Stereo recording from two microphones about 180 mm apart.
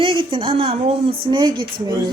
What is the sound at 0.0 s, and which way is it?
Speech, 30° right (ahead or behind).